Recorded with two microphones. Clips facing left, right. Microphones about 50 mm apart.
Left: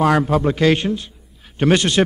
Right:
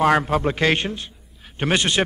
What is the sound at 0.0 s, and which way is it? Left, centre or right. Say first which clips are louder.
Speech: left 2 dB; right.